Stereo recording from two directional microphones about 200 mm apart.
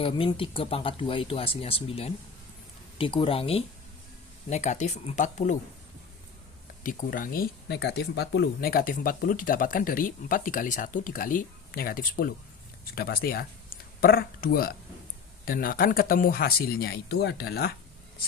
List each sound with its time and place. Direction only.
0.0 s speech: 25° left (ahead or behind)
6.8 s speech: 40° left (ahead or behind)